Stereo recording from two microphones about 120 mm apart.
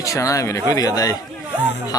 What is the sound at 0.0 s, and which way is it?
Speech, 25° left (ahead or behind).